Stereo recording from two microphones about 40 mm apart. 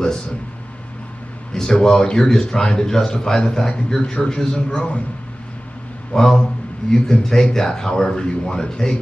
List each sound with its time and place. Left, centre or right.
1.5 s speech: centre
4.7 s a man's voice: left
6.1 s speech: centre